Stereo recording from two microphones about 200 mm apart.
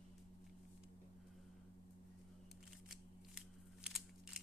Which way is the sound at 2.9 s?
5° right (ahead or behind).